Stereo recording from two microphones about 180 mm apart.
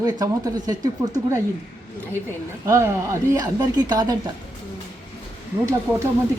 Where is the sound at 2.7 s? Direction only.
15° right (ahead or behind).